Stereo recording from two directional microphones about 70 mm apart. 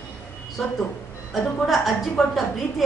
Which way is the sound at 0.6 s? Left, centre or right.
Centre.